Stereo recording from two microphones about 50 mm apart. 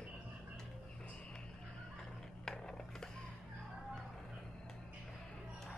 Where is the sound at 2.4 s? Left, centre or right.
Centre.